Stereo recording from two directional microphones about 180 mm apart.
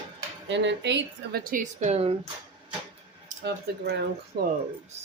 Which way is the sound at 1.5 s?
45° right (ahead or behind).